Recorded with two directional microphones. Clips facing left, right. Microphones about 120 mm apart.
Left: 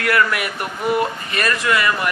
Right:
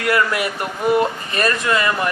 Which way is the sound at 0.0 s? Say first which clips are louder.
Even; 25° right (ahead or behind).